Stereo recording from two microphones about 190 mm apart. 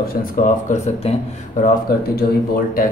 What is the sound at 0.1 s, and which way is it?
A man's voice, 45° left (ahead or behind).